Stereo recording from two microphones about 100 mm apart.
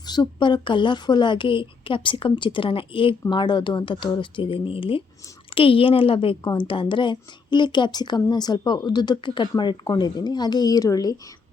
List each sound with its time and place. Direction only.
0.0 s a woman's voice: 45° left (ahead or behind)